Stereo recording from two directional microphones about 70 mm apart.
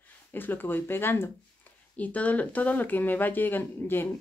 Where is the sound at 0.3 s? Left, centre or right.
Left.